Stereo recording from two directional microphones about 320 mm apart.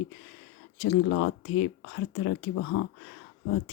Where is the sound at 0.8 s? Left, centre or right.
Left.